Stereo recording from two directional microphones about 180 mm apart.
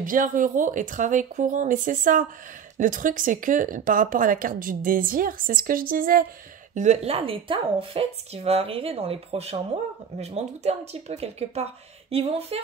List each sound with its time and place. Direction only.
0.0 s speech: 50° right (ahead or behind)
6.7 s speech: 40° right (ahead or behind)